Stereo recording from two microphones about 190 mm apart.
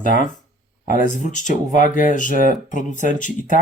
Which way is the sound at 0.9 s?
40° left (ahead or behind).